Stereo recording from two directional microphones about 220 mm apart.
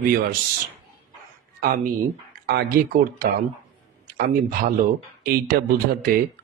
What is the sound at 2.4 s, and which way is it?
A man's voice, 45° right (ahead or behind).